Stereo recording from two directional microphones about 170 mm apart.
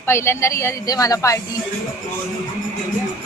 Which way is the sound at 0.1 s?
15° left (ahead or behind).